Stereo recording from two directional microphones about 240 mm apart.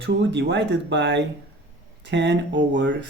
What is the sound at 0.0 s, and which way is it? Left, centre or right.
Speech, right.